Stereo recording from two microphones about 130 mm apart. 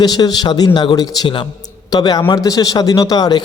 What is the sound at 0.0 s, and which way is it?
A man's voice, 30° left (ahead or behind).